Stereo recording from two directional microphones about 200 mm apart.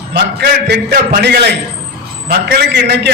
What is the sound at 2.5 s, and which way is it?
Speech, 55° right (ahead or behind).